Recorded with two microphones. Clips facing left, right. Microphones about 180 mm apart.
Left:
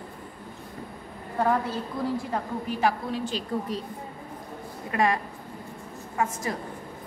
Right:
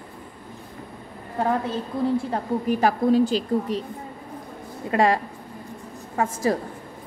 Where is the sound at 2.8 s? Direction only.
40° right (ahead or behind).